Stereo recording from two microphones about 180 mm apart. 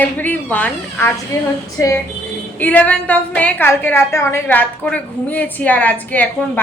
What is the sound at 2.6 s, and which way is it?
A woman's voice, 10° left (ahead or behind).